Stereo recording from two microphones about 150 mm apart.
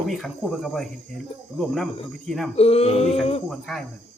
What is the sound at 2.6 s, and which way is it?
Speech, 40° left (ahead or behind).